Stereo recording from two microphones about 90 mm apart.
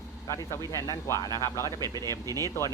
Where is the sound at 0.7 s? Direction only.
40° left (ahead or behind).